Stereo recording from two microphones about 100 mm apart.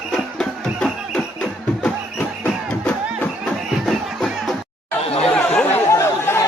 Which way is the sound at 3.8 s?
5° left (ahead or behind).